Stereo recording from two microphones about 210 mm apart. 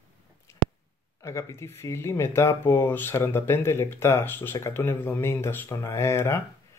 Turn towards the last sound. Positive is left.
turn(degrees=10)  # may be behind; listen again after turning